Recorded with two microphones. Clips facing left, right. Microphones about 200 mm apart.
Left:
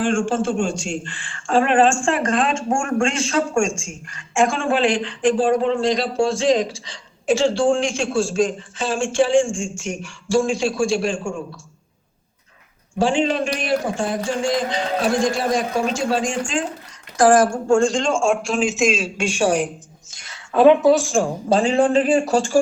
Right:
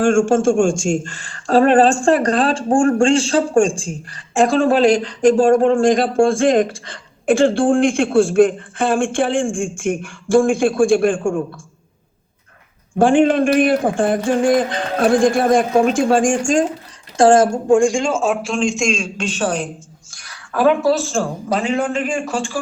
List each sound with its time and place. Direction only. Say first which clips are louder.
0.0 s a man's voice: right 6 dB; 45° right (ahead or behind)
13.0 s a man's voice: right 6 dB; 55° right (ahead or behind)
17.2 s a man's voice: right 3 dB; 25° right (ahead or behind); by 21.3 s 15° left (ahead or behind)
21.5 s speech: left 4 dB; 30° left (ahead or behind)